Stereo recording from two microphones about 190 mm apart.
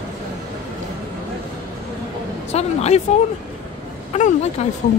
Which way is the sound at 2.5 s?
35° left (ahead or behind).